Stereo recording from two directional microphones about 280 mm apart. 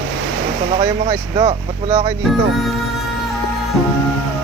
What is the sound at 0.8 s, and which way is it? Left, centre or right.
Speech, right.